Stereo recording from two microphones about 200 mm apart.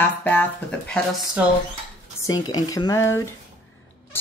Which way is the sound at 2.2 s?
20° left (ahead or behind).